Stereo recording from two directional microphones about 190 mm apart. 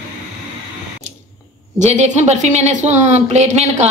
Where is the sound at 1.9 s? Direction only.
40° right (ahead or behind).